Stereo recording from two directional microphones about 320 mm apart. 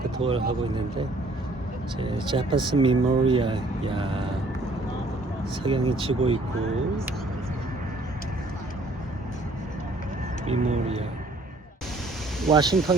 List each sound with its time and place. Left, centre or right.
0.2 s speech: centre
2.0 s speech: centre
5.6 s speech: centre
10.4 s speech: right
12.5 s speech: centre